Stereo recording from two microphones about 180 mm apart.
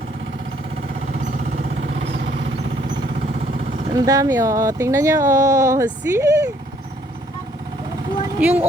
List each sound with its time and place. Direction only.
1.2 s a sound: 45° right (ahead or behind)
1.9 s vehicle: 80° right
3.6 s vehicle: 35° right (ahead or behind)
3.9 s speech: 20° right (ahead or behind)
8.4 s speech: 10° right (ahead or behind)